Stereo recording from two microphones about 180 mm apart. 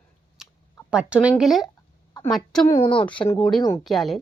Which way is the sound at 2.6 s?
25° left (ahead or behind).